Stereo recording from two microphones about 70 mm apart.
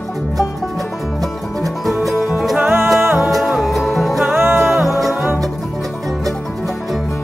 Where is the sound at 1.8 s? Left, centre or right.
Centre.